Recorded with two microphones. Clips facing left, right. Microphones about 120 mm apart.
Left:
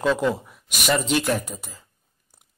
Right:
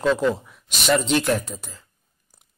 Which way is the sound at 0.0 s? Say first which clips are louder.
Right 1 dB; 5° left (ahead or behind).